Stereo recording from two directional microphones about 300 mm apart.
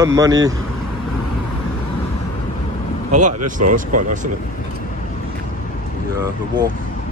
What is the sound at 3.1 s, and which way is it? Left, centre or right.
Speech, right.